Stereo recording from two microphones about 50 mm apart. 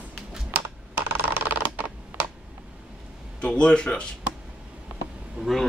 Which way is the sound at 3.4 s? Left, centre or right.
Left.